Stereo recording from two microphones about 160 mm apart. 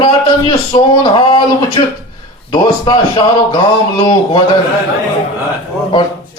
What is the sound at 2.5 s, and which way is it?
A man's voice, 25° left (ahead or behind).